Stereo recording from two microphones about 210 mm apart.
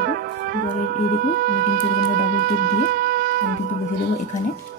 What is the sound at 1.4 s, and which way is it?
Music, 45° right (ahead or behind).